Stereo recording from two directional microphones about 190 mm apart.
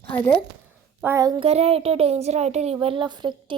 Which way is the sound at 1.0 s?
15° right (ahead or behind).